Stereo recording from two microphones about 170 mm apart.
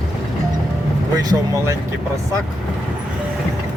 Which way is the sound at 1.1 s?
20° right (ahead or behind).